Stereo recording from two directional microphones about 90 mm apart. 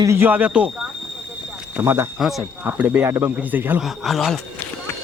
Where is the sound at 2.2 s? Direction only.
Centre (ahead or behind).